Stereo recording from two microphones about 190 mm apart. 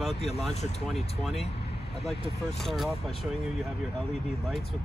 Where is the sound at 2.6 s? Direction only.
Centre (ahead or behind).